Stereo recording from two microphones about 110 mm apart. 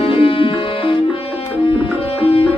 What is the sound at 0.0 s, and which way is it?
Music, 55° left (ahead or behind).